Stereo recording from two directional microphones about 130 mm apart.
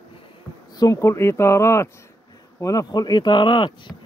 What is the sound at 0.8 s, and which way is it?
Speech, 25° left (ahead or behind).